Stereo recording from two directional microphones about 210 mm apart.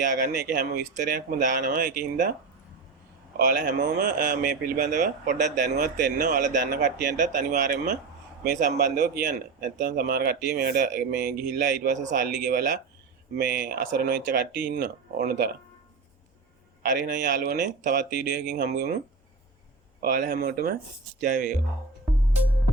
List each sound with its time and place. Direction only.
0.2 s speech: 45° right (ahead or behind)
3.3 s speech: 45° right (ahead or behind)
16.8 s speech: 45° right (ahead or behind)
20.0 s speech: 45° right (ahead or behind)
21.2 s speech: 35° right (ahead or behind)